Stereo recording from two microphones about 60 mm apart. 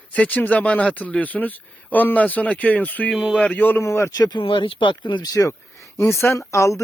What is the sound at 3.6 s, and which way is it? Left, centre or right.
Speech, left.